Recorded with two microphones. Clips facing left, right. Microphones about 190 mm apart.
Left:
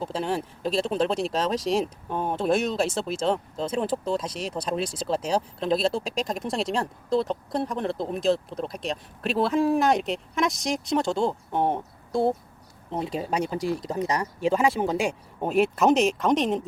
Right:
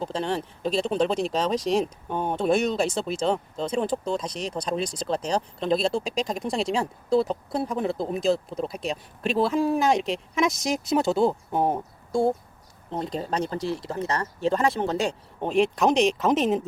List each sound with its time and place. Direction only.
0.0 s speech: 5° left (ahead or behind)